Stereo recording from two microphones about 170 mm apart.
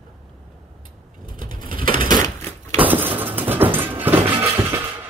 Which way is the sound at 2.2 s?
15° left (ahead or behind).